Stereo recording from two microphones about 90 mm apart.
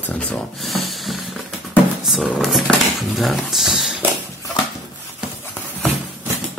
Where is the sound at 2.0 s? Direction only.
Centre (ahead or behind).